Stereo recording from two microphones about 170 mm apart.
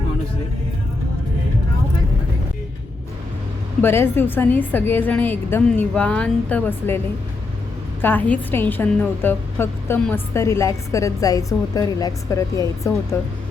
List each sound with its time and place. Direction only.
3.8 s a woman's voice: 15° left (ahead or behind)
8.0 s a woman's voice: 10° left (ahead or behind)